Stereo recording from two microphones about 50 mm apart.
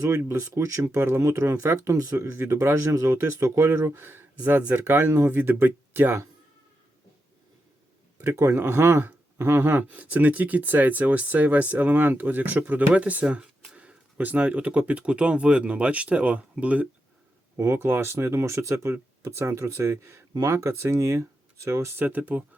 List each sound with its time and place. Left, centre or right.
0.0 s speech: right
5.4 s speech: right
8.2 s speech: right
9.9 s speech: right
17.7 s speech: right
20.8 s speech: right